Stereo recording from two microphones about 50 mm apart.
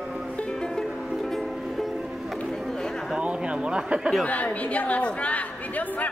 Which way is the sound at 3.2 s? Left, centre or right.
Right.